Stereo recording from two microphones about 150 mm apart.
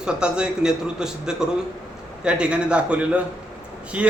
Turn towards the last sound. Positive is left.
turn(degrees=-10)  # may be behind; listen again after turning